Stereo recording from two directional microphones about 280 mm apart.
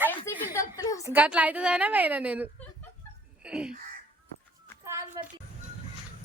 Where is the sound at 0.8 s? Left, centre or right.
Centre.